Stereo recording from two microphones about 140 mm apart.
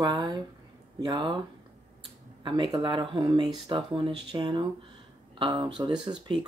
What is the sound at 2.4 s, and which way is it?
Speech, 35° right (ahead or behind).